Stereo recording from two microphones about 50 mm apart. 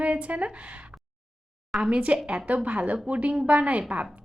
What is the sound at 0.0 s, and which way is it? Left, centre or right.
Speech, right.